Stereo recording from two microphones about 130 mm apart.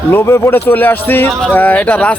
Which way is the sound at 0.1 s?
20° left (ahead or behind).